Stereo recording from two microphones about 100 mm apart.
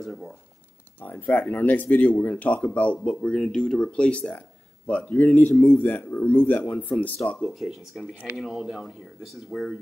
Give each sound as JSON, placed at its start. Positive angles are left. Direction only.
{"t": 0.0, "sound": "speech", "side_deg": 5}
{"t": 1.0, "sound": "speech", "side_deg": 20}